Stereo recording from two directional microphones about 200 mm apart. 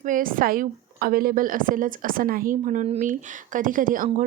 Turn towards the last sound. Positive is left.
turn(degrees=-40)  # may be behind; listen again after turning